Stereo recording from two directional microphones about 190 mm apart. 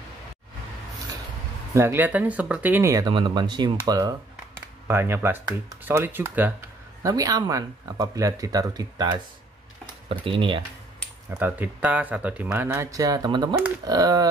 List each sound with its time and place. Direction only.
1.7 s speech: 15° right (ahead or behind)
11.3 s speech: 10° right (ahead or behind)